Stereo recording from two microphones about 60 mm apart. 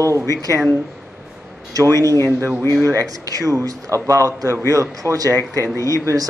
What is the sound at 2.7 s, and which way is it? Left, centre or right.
Speech, right.